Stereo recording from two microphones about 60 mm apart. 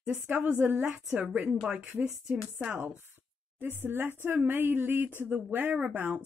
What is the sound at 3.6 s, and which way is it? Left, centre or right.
A woman's voice, right.